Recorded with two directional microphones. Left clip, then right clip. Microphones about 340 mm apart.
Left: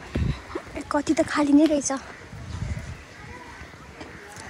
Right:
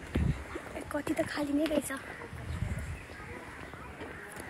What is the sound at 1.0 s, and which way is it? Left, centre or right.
Speech, centre.